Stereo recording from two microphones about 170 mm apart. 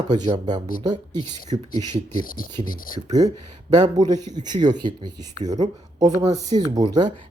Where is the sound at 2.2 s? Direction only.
55° left (ahead or behind).